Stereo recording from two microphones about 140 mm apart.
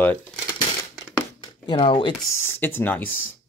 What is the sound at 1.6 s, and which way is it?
Speech, 35° left (ahead or behind).